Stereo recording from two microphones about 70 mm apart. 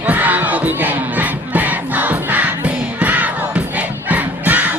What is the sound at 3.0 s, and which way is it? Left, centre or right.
Crowd, right.